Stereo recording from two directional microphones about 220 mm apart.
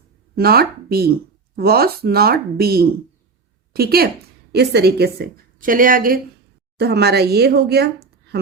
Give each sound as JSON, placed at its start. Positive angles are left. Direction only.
{"t": 0.3, "sound": "a woman's voice", "side_deg": -45}